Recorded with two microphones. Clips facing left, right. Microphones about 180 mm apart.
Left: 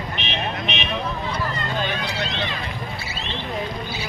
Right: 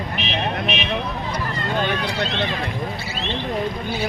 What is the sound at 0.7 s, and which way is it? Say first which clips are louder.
Vehicle: right 3 dB; centre (ahead or behind).